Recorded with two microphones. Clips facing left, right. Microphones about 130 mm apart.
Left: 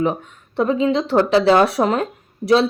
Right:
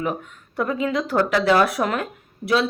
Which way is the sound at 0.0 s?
25° left (ahead or behind).